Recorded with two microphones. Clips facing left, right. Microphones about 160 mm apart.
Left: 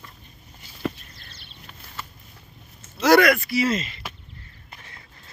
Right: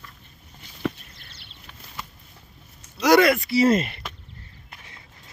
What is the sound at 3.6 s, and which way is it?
Speech, 55° right (ahead or behind).